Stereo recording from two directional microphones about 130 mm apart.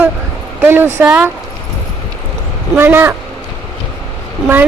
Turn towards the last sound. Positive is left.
turn(degrees=-15)  # may be behind; listen again after turning